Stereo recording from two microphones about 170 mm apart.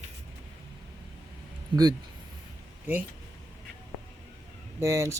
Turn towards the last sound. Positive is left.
turn(degrees=-15)  # may be behind; listen again after turning